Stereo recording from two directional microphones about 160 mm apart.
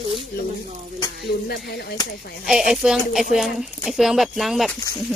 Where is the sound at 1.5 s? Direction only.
85° left.